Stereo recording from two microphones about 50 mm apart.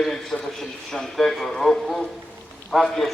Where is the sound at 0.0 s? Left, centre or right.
Centre.